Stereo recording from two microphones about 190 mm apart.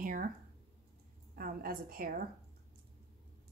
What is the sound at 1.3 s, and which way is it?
Speech, 50° right (ahead or behind).